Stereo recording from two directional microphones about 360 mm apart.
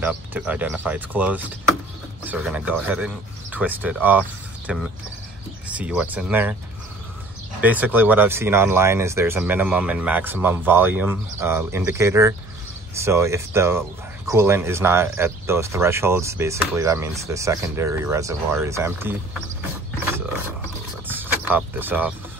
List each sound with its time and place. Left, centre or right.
0.0 s speech: centre
7.6 s speech: centre
21.1 s a sound: centre